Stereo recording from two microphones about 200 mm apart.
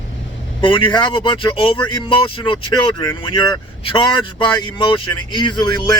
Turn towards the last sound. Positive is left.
turn(degrees=20)  # may be behind; listen again after turning